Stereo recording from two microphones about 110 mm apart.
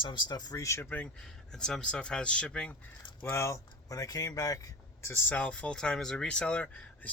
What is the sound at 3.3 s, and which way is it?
Speech, 25° left (ahead or behind).